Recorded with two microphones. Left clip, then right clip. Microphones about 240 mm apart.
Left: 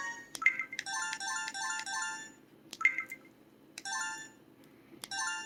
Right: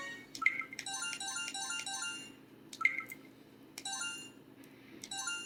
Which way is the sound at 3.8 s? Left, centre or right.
Centre.